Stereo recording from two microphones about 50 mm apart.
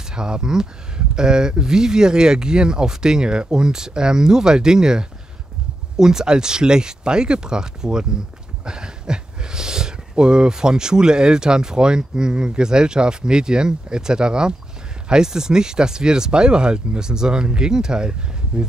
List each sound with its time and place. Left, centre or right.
0.1 s speech: centre